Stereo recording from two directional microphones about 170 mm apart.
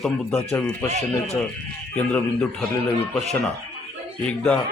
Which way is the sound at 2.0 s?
5° left (ahead or behind).